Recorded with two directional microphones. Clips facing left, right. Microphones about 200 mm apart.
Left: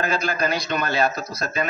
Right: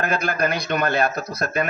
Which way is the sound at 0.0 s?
60° right (ahead or behind).